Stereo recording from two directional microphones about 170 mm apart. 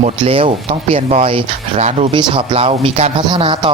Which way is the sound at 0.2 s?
30° right (ahead or behind).